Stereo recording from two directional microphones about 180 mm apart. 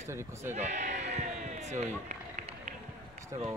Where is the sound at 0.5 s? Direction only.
40° right (ahead or behind).